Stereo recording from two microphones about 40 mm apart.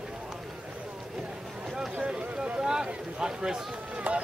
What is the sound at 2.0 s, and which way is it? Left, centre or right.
Run, right.